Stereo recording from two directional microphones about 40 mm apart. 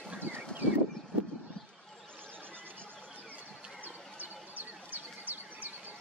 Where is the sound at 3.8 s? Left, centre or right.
Right.